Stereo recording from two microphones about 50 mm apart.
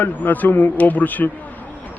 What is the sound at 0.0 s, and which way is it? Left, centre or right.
A man's voice, left.